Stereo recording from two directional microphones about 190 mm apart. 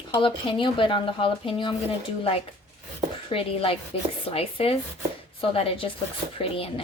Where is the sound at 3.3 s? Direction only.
30° left (ahead or behind).